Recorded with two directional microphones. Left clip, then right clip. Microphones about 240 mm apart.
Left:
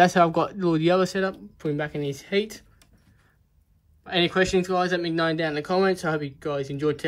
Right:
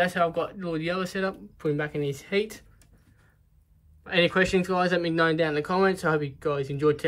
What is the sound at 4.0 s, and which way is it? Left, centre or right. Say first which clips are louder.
Speech: even; centre.